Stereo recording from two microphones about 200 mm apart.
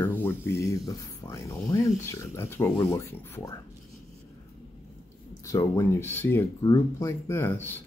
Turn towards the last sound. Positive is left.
turn(degrees=10)  # may be behind; listen again after turning